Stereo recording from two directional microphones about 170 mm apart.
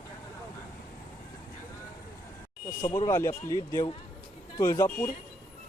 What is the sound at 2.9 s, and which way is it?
Speech, 15° left (ahead or behind).